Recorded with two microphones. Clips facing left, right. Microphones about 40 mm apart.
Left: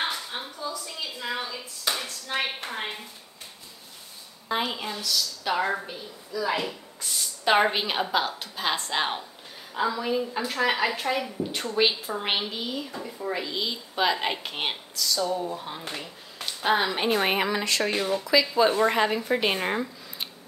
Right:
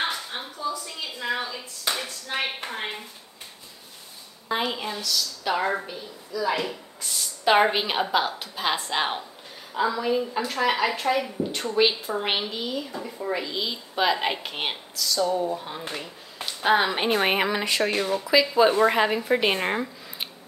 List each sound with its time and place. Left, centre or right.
0.0 s a sound: centre
4.5 s a woman's voice: centre
16.9 s speech: right
17.9 s a woman's voice: centre